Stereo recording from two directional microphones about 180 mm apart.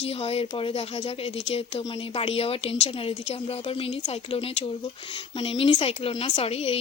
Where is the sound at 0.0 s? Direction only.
35° left (ahead or behind).